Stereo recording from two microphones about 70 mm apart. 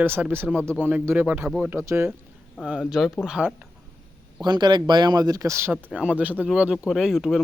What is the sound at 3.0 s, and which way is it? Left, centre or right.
Speech, centre.